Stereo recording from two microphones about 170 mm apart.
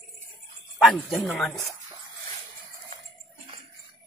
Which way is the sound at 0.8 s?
Centre (ahead or behind).